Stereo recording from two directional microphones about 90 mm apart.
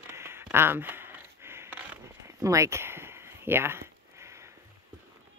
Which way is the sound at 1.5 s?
25° right (ahead or behind).